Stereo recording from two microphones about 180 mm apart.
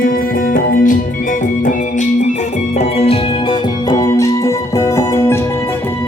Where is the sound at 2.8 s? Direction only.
35° left (ahead or behind).